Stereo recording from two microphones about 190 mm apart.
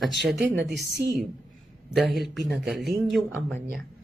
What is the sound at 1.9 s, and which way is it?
Speech, centre (ahead or behind).